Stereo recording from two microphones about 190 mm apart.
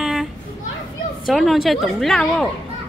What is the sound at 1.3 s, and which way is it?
A child's voice, centre (ahead or behind).